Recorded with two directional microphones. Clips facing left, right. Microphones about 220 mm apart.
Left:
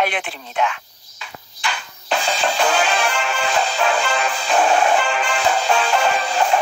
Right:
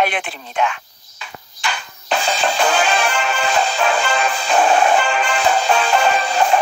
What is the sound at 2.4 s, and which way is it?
Music, 50° right (ahead or behind).